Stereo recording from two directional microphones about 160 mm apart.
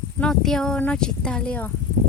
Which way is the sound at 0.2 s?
5° left (ahead or behind).